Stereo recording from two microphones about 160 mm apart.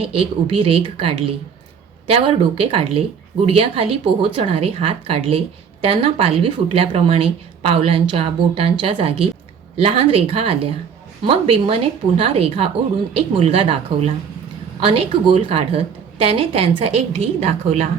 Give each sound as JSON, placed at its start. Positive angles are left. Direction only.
{"t": 0.0, "sound": "speech", "side_deg": -35}